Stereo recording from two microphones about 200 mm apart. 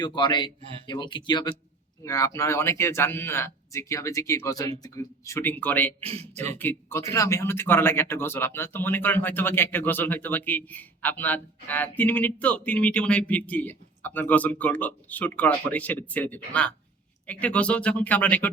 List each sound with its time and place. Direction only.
0.0 s a man's voice: 25° left (ahead or behind)
6.0 s speech: 30° right (ahead or behind)
6.6 s a man's voice: 10° left (ahead or behind)